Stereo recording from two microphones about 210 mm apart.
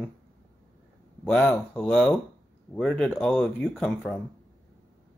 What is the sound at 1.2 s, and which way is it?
Speech, 5° left (ahead or behind).